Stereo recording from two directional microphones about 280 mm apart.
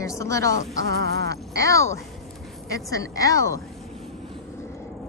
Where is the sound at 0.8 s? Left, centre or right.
Right.